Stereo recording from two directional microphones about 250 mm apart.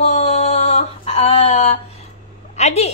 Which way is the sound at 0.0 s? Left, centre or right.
Left.